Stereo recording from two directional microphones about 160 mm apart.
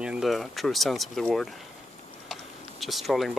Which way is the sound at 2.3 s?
Centre (ahead or behind).